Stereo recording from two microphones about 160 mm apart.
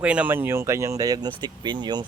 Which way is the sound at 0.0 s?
10° right (ahead or behind).